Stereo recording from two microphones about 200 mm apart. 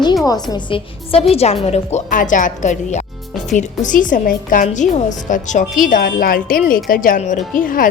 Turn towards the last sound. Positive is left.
turn(degrees=45)  # may be behind; listen again after turning